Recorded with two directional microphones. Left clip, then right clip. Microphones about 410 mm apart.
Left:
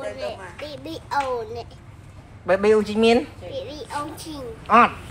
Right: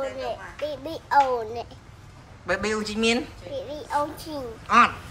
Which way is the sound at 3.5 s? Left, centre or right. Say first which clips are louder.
Right 6 dB; centre.